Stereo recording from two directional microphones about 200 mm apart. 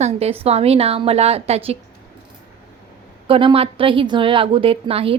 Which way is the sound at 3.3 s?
25° right (ahead or behind).